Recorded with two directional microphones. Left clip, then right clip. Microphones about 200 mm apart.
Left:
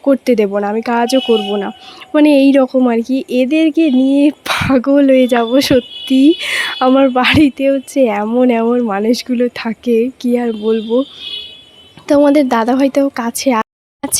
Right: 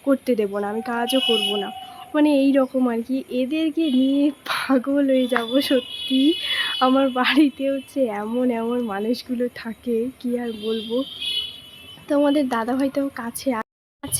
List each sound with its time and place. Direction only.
0.0 s speech: 35° left (ahead or behind)
12.0 s speech: 40° left (ahead or behind)